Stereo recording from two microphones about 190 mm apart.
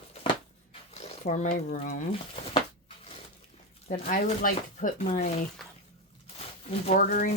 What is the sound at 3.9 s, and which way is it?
Speech, 40° left (ahead or behind).